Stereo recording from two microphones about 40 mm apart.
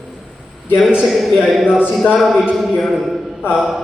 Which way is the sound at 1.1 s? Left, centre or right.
Centre.